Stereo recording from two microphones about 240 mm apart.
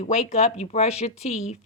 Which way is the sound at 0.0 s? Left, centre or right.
Left.